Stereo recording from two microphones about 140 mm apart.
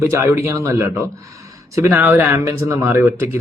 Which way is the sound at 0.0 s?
20° right (ahead or behind).